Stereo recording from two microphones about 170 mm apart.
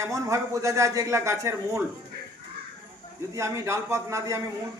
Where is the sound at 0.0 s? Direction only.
20° right (ahead or behind).